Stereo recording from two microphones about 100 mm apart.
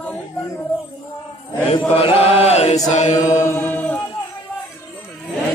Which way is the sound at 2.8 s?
35° left (ahead or behind).